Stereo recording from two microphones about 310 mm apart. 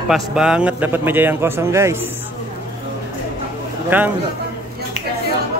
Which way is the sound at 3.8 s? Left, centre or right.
Centre.